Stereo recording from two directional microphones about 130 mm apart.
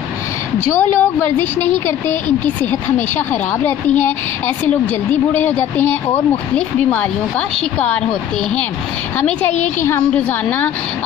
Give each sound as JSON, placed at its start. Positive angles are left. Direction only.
{"t": 0.7, "sound": "a woman's voice", "side_deg": 15}